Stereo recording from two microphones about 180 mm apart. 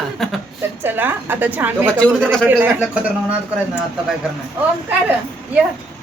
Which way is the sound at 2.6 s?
10° right (ahead or behind).